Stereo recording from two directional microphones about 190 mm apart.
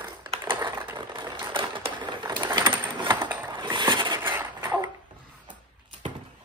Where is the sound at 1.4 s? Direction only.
25° right (ahead or behind).